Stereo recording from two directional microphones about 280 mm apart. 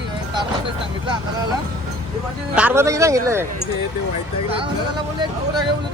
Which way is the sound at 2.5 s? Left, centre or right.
Centre.